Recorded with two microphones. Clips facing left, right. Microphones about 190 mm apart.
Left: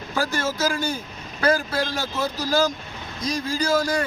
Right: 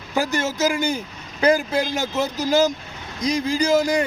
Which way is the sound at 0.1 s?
20° right (ahead or behind).